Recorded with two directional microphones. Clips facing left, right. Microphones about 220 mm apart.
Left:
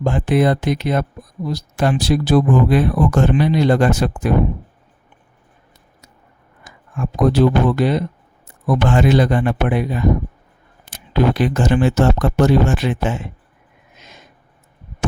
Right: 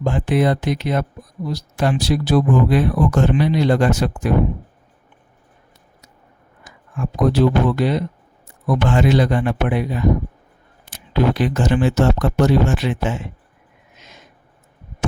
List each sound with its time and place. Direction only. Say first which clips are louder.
0.0 s speech: left 2 dB; 50° left (ahead or behind)
6.7 s a sound: left 2 dB; 50° left (ahead or behind)
7.3 s speech: left 1 dB; 50° left (ahead or behind)